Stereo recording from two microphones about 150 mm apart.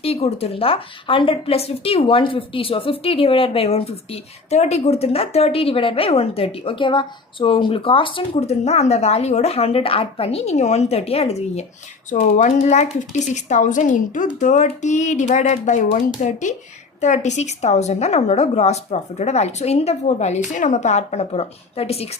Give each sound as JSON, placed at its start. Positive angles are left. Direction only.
{"t": 0.0, "sound": "a woman's voice", "side_deg": 40}